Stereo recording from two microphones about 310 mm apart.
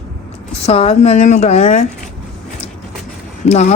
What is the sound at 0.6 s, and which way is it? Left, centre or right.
Speech, centre.